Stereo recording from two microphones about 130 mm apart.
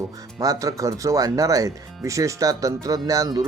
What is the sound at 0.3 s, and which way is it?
Speech, 25° right (ahead or behind).